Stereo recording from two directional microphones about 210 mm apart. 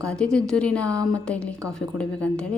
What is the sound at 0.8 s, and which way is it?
Speech, 15° right (ahead or behind).